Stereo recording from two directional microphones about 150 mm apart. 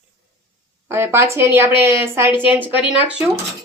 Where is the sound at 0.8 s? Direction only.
15° right (ahead or behind).